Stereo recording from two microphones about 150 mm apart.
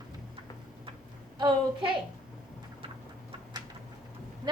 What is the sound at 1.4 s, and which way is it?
Speech, 30° right (ahead or behind).